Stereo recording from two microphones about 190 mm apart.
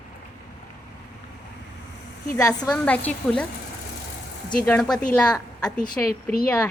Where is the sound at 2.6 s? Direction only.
5° left (ahead or behind).